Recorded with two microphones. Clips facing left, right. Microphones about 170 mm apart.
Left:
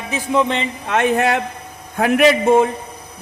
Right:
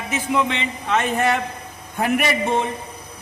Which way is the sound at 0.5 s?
55° left (ahead or behind).